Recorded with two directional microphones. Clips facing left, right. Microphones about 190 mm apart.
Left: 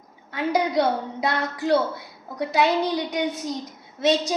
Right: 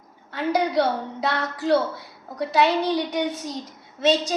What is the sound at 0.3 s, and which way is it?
A woman's voice, 10° left (ahead or behind).